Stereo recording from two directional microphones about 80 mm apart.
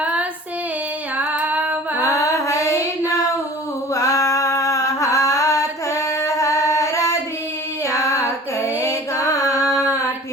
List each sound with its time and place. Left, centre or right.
0.0 s child singing: centre
1.2 s female singing: centre
2.0 s female singing: left
3.9 s a sound: left
8.6 s female singing: left